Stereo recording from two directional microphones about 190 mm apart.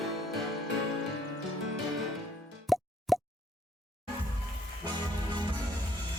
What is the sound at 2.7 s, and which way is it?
Plop, centre (ahead or behind).